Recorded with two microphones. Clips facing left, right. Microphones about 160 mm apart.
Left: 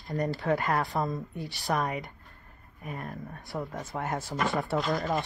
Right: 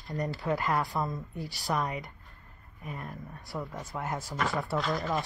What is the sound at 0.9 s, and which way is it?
Speech, 45° left (ahead or behind).